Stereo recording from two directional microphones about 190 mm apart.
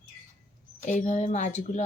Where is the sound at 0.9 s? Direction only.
40° left (ahead or behind).